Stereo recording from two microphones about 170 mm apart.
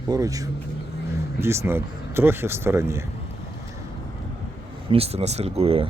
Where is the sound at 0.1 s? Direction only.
20° right (ahead or behind).